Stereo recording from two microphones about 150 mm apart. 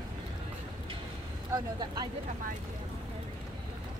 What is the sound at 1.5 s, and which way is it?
Speech, 25° right (ahead or behind).